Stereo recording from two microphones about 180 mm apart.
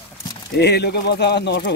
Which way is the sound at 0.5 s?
65° left (ahead or behind).